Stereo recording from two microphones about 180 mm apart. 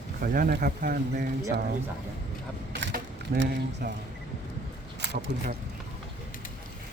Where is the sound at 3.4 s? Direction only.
65° right (ahead or behind).